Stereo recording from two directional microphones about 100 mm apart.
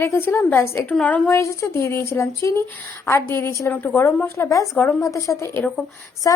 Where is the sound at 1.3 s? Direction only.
30° left (ahead or behind).